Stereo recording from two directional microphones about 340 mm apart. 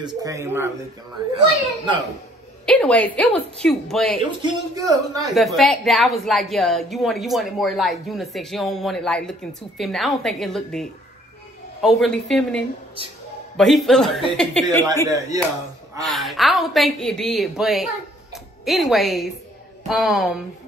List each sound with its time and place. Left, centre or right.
0.0 s speech: centre
2.6 s a woman's voice: centre
4.4 s speech: centre
5.3 s a woman's voice: centre
15.0 s a woman's voice: centre
18.3 s music: centre
19.9 s a woman's voice: centre